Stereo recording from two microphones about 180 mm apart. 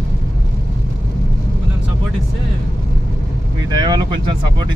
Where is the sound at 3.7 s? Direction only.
25° right (ahead or behind).